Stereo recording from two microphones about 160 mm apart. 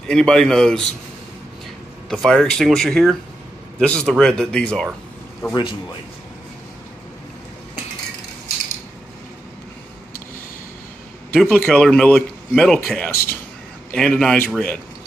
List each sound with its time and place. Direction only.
0.1 s speech: 5° left (ahead or behind)
2.0 s speech: centre (ahead or behind)
5.5 s a man's voice: 30° left (ahead or behind)
11.3 s speech: 5° left (ahead or behind)